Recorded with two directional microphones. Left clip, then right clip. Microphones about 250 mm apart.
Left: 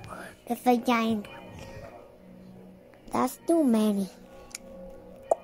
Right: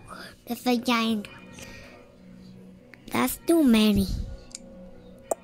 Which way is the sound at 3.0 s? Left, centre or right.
Right.